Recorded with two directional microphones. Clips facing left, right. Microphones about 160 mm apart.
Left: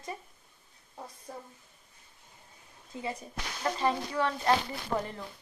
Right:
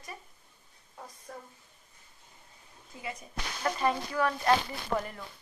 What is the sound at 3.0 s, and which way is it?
A woman's voice, 30° left (ahead or behind).